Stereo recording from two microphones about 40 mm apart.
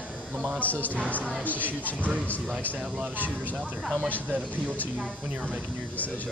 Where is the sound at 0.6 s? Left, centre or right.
Left.